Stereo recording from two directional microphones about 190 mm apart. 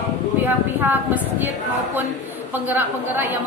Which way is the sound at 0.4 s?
10° right (ahead or behind).